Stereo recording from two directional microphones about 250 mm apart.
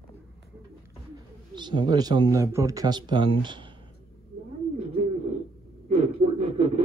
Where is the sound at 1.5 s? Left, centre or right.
Centre.